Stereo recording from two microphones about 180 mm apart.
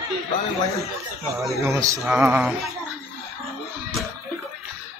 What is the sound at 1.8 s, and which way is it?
Speech, 15° right (ahead or behind).